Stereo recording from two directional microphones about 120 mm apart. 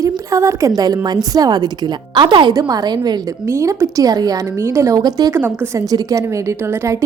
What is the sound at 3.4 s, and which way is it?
A woman's voice, 25° right (ahead or behind).